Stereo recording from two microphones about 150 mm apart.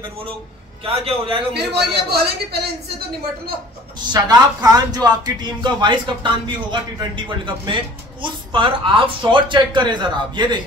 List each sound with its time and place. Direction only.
0.8 s a man's voice: 40° right (ahead or behind)
1.5 s a man's voice: 90° right
4.1 s speech: 25° right (ahead or behind)